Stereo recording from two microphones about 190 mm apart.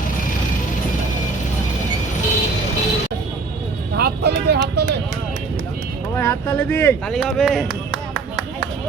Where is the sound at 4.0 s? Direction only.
60° right (ahead or behind).